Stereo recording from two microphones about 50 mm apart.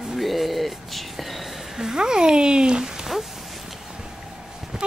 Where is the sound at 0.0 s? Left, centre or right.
Centre.